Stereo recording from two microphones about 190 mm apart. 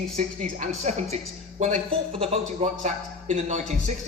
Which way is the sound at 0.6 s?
35° right (ahead or behind).